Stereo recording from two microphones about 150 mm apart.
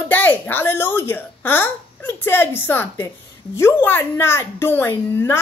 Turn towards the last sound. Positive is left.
turn(degrees=15)  # may be behind; listen again after turning